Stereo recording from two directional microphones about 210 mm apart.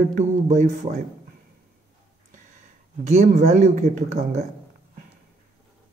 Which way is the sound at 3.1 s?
35° right (ahead or behind).